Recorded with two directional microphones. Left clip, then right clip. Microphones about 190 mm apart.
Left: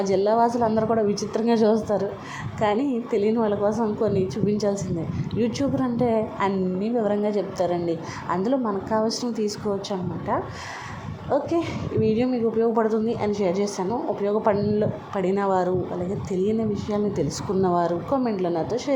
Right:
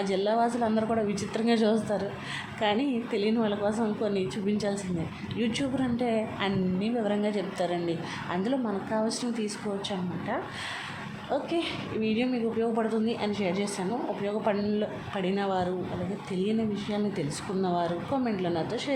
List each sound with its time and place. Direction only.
0.1 s a woman's voice: 15° left (ahead or behind)
12.0 s a woman's voice: 15° left (ahead or behind)